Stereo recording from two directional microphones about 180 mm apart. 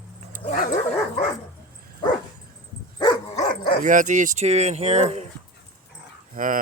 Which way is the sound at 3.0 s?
25° left (ahead or behind).